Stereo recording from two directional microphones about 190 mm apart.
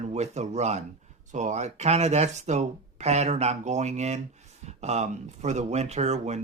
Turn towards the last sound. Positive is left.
turn(degrees=-35)  # may be behind; listen again after turning